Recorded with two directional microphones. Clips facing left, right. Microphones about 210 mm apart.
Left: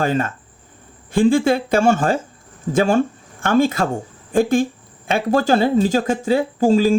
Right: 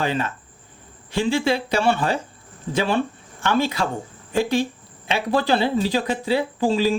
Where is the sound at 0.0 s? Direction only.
45° left (ahead or behind).